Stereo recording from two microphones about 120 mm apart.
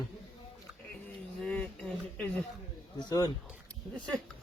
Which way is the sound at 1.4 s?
10° left (ahead or behind).